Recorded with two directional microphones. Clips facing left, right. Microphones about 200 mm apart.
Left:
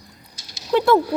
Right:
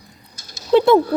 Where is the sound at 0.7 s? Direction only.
25° right (ahead or behind).